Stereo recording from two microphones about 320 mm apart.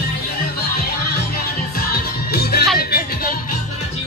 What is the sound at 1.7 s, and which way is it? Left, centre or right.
Music, left.